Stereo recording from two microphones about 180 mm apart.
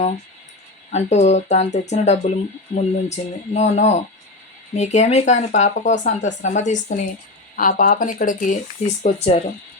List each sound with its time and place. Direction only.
0.9 s speech: 40° left (ahead or behind)
9.0 s speech: 35° left (ahead or behind)